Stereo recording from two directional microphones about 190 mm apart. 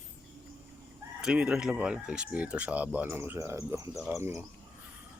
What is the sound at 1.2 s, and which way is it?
Speech, 5° right (ahead or behind).